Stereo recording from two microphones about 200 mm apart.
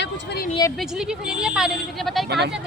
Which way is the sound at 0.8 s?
5° right (ahead or behind).